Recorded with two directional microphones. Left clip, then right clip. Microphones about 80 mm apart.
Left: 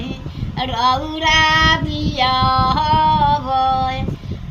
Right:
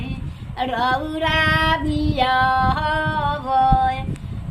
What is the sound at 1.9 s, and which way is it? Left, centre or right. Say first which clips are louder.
Child singing: left 1 dB; right.